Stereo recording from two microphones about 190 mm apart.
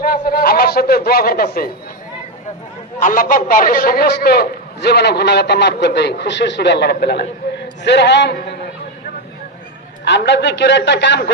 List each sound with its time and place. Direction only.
0.0 s a sound: 50° left (ahead or behind)
3.0 s a man's voice: 45° left (ahead or behind); by 8.5 s 65° left (ahead or behind)
10.0 s a man's voice: 65° left (ahead or behind)